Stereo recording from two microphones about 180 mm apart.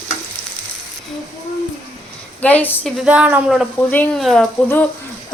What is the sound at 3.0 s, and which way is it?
Speech, 5° right (ahead or behind).